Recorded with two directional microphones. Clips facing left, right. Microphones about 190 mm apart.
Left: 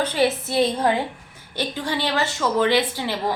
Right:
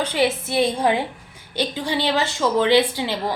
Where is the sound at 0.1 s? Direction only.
15° right (ahead or behind).